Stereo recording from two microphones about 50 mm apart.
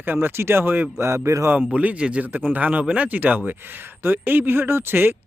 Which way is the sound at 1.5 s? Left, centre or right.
Right.